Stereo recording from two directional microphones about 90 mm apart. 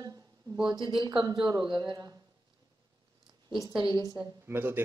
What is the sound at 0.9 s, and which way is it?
Speech, 60° right (ahead or behind).